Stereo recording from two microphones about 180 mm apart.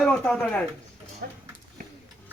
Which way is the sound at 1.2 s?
55° right (ahead or behind).